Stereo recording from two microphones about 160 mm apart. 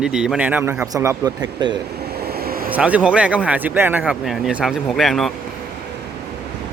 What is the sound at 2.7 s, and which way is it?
Speech, 10° right (ahead or behind).